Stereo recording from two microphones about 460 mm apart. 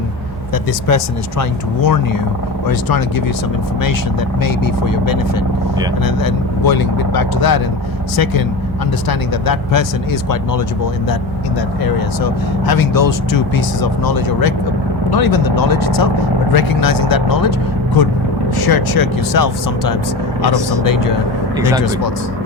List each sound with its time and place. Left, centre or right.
0.5 s speech: left
4.4 s speech: left
11.9 s speech: left
18.6 s speech: left
21.6 s speech: centre